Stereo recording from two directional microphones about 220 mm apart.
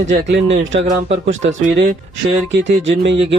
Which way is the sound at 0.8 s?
35° right (ahead or behind).